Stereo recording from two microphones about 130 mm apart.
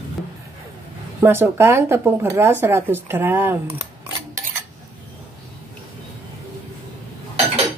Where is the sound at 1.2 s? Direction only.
15° right (ahead or behind).